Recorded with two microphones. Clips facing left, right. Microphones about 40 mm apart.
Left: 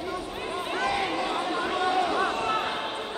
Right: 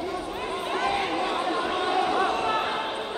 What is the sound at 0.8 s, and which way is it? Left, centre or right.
Chatter, right.